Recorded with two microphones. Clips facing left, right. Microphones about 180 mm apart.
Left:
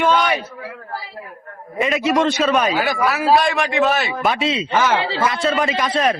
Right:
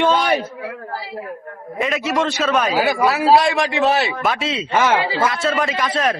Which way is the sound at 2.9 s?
25° right (ahead or behind).